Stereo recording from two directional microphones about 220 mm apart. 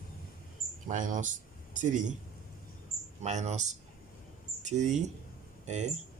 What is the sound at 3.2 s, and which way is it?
Speech, 30° right (ahead or behind).